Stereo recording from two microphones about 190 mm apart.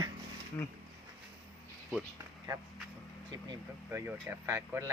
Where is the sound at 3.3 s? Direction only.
20° right (ahead or behind).